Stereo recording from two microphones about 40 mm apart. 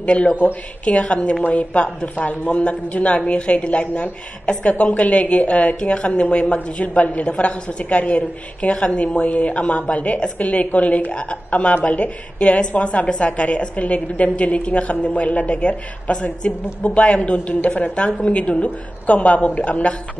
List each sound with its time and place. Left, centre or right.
0.0 s a woman's voice: left